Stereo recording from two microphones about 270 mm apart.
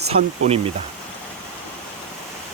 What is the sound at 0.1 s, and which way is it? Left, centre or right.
Speech, right.